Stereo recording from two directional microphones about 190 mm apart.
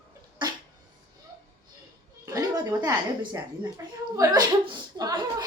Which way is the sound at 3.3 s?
15° right (ahead or behind).